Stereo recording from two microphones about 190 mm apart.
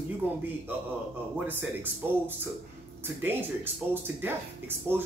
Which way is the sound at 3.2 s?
10° right (ahead or behind).